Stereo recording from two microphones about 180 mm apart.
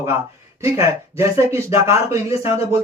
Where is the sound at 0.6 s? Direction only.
15° right (ahead or behind).